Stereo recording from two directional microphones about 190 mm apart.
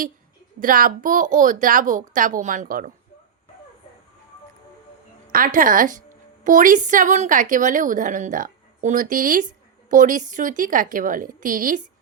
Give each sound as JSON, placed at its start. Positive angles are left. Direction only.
{"t": 0.6, "sound": "a woman's voice", "side_deg": -45}
{"t": 5.3, "sound": "a woman's voice", "side_deg": -45}